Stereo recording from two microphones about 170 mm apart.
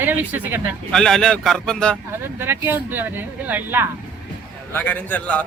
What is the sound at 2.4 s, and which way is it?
Speech, 15° right (ahead or behind).